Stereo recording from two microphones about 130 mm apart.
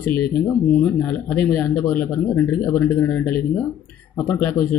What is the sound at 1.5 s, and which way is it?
A man's voice, 15° left (ahead or behind).